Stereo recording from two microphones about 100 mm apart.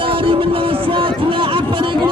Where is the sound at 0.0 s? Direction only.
65° right (ahead or behind).